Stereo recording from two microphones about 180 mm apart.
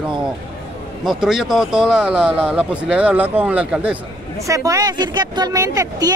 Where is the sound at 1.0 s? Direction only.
Centre (ahead or behind).